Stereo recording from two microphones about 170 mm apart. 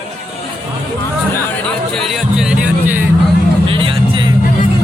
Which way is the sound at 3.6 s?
30° right (ahead or behind).